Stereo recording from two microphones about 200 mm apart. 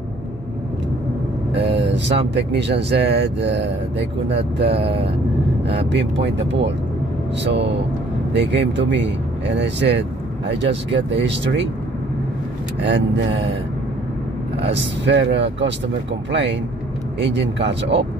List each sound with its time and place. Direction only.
1.6 s vehicle: 60° right (ahead or behind)
2.3 s speech: 60° right (ahead or behind)
12.8 s speech: 65° right (ahead or behind)
14.7 s speech: 65° right (ahead or behind)